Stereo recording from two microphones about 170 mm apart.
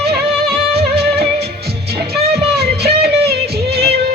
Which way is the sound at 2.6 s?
70° right (ahead or behind).